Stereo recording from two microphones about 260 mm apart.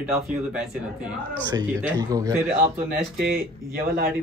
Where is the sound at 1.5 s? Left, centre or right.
Centre.